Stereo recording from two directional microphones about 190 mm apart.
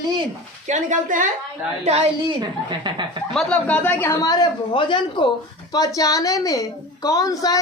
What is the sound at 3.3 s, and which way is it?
A woman's voice, 5° left (ahead or behind).